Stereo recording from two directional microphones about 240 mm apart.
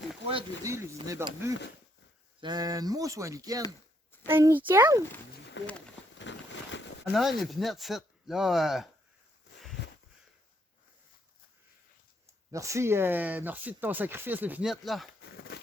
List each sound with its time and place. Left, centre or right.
0.3 s speech: centre
5.6 s speech: left
6.1 s a sound: left
7.0 s speech: centre
12.5 s speech: centre